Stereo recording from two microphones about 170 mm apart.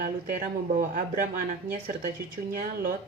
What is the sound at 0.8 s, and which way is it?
Speech, 55° right (ahead or behind).